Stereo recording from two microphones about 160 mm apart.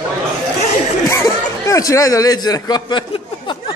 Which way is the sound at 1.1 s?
20° left (ahead or behind).